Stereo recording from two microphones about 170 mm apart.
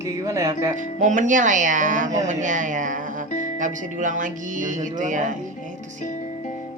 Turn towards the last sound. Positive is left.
turn(degrees=-50)  # may be behind; listen again after turning